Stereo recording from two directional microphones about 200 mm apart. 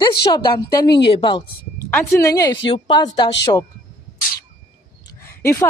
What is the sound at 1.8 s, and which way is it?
Speech, 10° left (ahead or behind).